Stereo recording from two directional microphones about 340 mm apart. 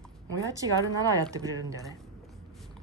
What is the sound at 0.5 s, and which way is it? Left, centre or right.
Speech, centre.